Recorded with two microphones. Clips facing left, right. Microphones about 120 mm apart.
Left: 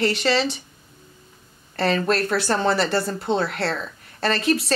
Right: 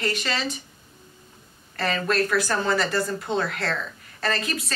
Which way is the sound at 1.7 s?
30° left (ahead or behind).